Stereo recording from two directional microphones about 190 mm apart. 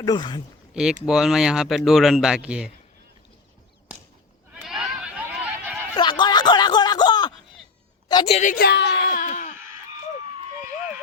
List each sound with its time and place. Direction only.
0.0 s speech: 20° left (ahead or behind)
0.7 s speech: 5° right (ahead or behind)
4.5 s sheep: centre (ahead or behind)
6.0 s a sound: 25° left (ahead or behind)
8.0 s a woman's voice: 25° left (ahead or behind); by 9.2 s 60° left (ahead or behind)
9.2 s a sound: 40° left (ahead or behind)